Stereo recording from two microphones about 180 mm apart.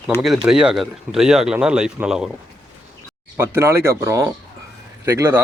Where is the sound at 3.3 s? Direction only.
15° right (ahead or behind).